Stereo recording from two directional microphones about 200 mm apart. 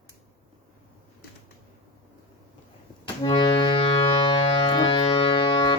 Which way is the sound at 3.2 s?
25° left (ahead or behind).